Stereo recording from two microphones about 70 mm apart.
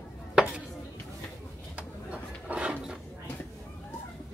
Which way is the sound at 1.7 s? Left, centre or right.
Centre.